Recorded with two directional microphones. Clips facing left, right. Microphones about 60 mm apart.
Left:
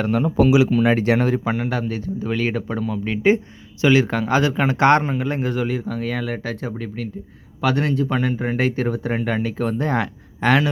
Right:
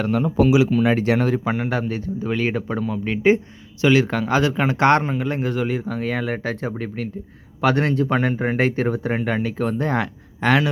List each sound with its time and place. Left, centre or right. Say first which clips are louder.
0.3 s speech: left 1 dB; left
1.1 s speech: left 1 dB; left
1.5 s speech: even; centre
3.8 s a man's voice: even; centre
5.6 s speech: even; centre